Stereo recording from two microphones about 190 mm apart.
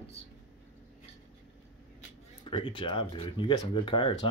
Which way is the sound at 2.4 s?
25° left (ahead or behind).